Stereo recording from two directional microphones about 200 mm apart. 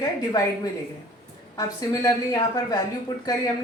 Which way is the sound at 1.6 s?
15° left (ahead or behind).